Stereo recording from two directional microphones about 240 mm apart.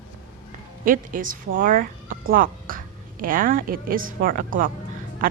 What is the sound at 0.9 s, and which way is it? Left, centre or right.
Speech, right.